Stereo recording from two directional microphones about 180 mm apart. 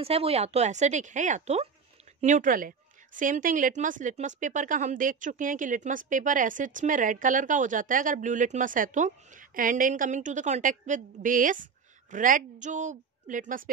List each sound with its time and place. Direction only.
0.0 s speech: 35° right (ahead or behind)